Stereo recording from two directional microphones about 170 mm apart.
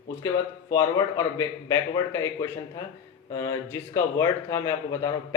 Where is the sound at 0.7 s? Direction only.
20° left (ahead or behind).